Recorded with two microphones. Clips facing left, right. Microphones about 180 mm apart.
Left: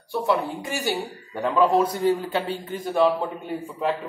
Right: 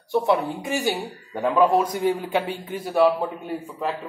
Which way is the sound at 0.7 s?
20° right (ahead or behind).